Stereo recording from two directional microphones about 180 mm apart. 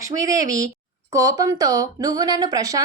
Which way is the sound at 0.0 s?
15° right (ahead or behind).